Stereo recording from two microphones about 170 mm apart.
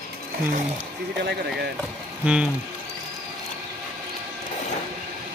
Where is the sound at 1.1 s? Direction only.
80° right.